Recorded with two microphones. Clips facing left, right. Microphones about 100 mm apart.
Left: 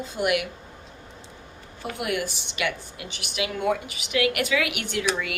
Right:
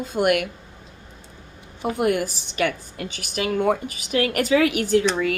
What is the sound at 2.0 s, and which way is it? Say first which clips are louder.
A woman's voice: right 6 dB; 45° right (ahead or behind).